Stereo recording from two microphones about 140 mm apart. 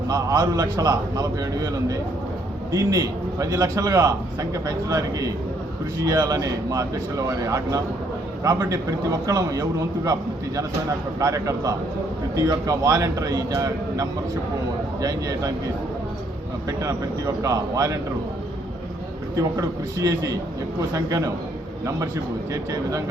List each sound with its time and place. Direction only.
0.1 s a man's voice: 25° right (ahead or behind)
17.4 s a man's voice: 25° right (ahead or behind)
19.4 s a man's voice: 25° right (ahead or behind)
22.5 s a man's voice: 25° right (ahead or behind)